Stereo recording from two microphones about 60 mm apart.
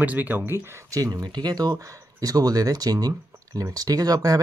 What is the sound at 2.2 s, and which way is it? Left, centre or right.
Speech, right.